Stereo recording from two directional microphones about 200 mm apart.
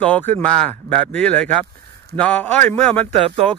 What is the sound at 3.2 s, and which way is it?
Speech, 30° right (ahead or behind).